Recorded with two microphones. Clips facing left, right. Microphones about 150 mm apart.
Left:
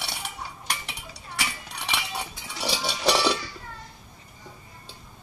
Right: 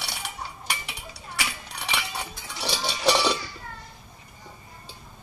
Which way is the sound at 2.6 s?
Centre (ahead or behind).